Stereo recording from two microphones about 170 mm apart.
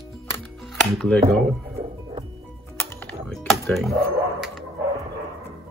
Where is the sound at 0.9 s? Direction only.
5° left (ahead or behind).